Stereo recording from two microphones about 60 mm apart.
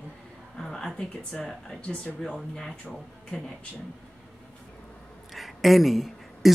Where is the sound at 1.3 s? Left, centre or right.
Centre.